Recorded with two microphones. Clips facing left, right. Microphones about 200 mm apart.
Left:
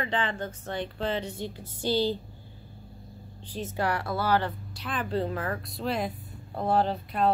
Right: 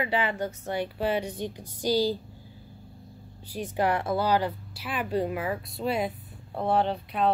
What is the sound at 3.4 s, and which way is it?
Speech, 15° right (ahead or behind).